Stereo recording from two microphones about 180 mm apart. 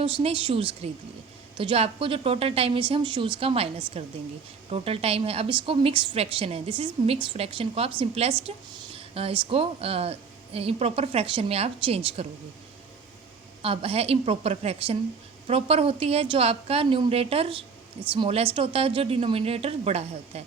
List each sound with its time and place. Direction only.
0.0 s a woman's voice: 30° right (ahead or behind)
13.6 s a woman's voice: 30° right (ahead or behind)